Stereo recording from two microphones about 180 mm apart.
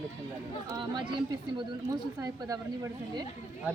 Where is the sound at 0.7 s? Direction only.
25° right (ahead or behind).